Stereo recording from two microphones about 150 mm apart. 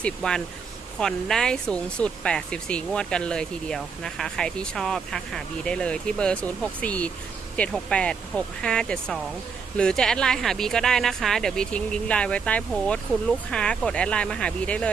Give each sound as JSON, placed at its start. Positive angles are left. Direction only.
{"t": 0.0, "sound": "speech", "side_deg": 5}